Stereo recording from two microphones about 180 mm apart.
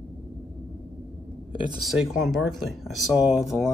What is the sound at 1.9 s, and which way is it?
Speech, centre (ahead or behind).